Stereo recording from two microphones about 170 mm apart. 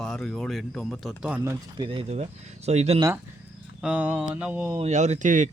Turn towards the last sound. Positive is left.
turn(degrees=-45)  # may be behind; listen again after turning